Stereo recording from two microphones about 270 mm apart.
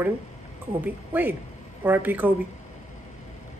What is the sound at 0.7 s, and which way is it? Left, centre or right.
A woman's voice, centre.